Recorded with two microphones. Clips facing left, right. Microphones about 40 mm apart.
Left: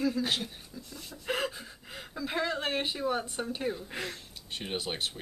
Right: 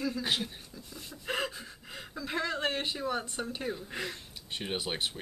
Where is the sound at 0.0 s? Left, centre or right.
Centre.